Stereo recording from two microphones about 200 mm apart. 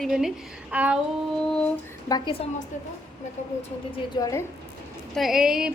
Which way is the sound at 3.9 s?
15° left (ahead or behind).